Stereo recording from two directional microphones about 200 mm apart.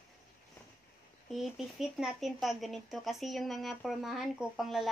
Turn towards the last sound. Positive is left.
turn(degrees=0)  # may be behind; listen again after turning